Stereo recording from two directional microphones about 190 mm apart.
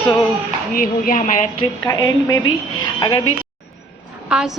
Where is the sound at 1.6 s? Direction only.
20° left (ahead or behind).